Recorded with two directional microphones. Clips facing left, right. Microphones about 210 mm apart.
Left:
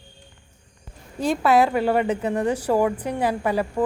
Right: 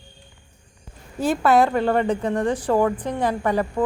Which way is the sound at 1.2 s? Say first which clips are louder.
Right 1 dB; centre (ahead or behind).